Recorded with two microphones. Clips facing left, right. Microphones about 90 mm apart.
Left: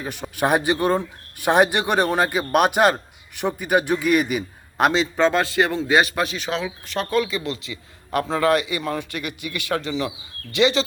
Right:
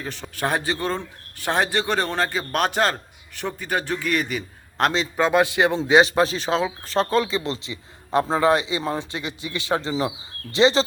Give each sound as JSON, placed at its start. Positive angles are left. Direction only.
{"t": 0.0, "sound": "a man's voice", "side_deg": 15}
{"t": 4.9, "sound": "a man's voice", "side_deg": -5}